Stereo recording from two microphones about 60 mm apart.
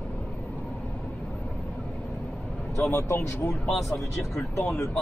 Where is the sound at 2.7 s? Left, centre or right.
Left.